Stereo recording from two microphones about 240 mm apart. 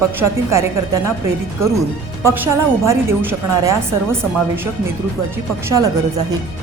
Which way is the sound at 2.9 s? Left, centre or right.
Centre.